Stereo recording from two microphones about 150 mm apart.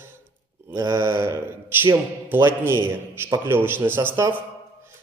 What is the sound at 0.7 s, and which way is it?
A man's voice, 20° right (ahead or behind).